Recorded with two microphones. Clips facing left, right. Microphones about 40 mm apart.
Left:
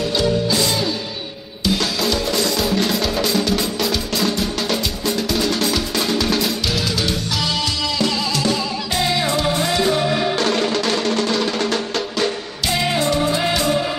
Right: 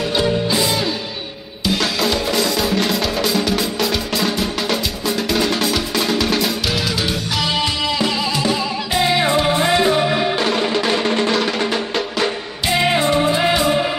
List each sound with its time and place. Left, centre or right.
0.1 s music: centre
1.7 s music: centre
7.5 s music: right